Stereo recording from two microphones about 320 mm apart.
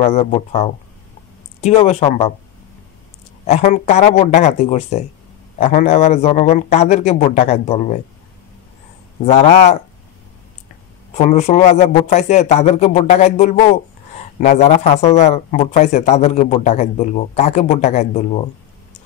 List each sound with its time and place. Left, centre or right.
0.0 s a man's voice: left
3.4 s a man's voice: left
9.2 s a man's voice: centre
11.1 s a man's voice: left